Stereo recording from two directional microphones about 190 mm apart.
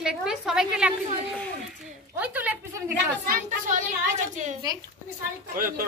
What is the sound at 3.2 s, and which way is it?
A woman's voice, 45° right (ahead or behind).